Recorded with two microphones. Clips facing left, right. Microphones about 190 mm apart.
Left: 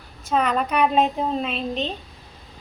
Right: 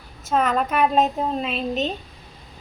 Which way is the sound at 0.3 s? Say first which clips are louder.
Right 1 dB; centre (ahead or behind).